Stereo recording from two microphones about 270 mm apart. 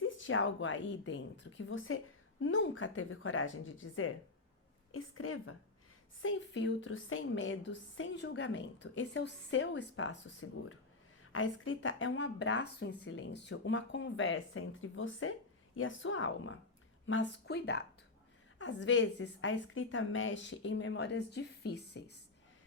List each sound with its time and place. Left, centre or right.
0.0 s a woman's voice: left
6.2 s a woman's voice: left
11.3 s a woman's voice: left